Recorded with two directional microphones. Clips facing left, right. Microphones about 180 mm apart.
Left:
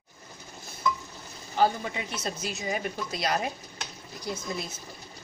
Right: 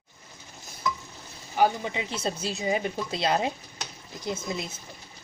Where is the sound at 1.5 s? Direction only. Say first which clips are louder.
Right 1 dB; 15° right (ahead or behind).